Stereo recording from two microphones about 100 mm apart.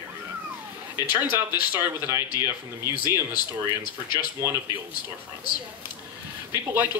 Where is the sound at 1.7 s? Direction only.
25° right (ahead or behind).